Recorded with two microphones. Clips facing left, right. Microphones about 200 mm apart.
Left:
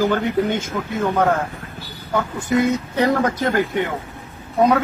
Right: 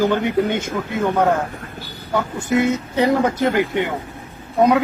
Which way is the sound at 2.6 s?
15° right (ahead or behind).